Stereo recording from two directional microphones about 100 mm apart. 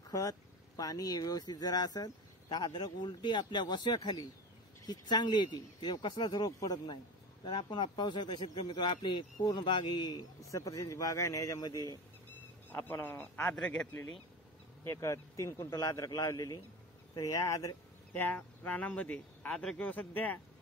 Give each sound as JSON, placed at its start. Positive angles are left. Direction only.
{"t": 0.1, "sound": "speech", "side_deg": 35}
{"t": 7.4, "sound": "speech", "side_deg": 50}
{"t": 12.6, "sound": "a man's voice", "side_deg": 20}
{"t": 14.9, "sound": "speech", "side_deg": 30}
{"t": 18.1, "sound": "speech", "side_deg": 20}